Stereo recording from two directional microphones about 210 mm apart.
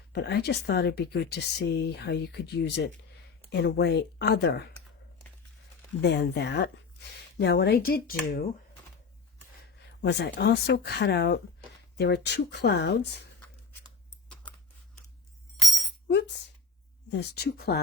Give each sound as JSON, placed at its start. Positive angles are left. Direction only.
{"t": 0.1, "sound": "speech", "side_deg": 50}
{"t": 6.0, "sound": "speech", "side_deg": 50}
{"t": 10.0, "sound": "speech", "side_deg": 55}
{"t": 16.0, "sound": "speech", "side_deg": 55}